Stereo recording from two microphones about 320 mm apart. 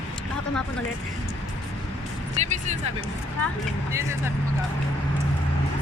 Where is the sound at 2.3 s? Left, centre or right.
Right.